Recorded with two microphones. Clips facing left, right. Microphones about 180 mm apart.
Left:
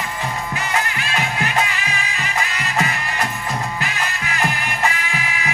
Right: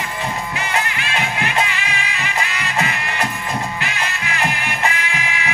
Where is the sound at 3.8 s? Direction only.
40° left (ahead or behind).